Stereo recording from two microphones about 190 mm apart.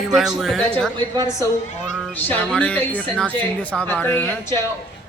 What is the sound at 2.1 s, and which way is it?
Speech, 10° left (ahead or behind).